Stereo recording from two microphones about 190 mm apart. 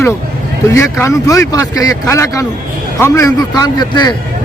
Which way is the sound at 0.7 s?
15° left (ahead or behind).